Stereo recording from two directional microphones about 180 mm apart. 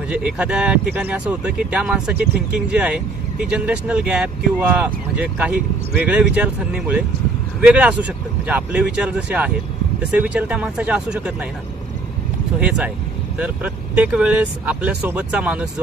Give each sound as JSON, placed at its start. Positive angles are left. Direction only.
{"t": 0.1, "sound": "speech", "side_deg": -5}
{"t": 12.5, "sound": "speech", "side_deg": -5}
{"t": 14.0, "sound": "speech", "side_deg": -5}